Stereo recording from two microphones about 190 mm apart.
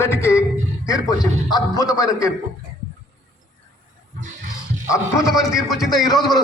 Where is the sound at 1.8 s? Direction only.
20° left (ahead or behind).